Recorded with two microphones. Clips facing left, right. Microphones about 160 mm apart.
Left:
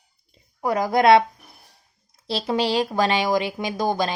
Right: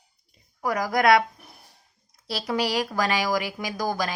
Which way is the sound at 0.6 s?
25° left (ahead or behind).